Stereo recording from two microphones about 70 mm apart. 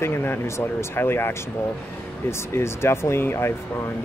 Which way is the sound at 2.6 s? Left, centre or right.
Left.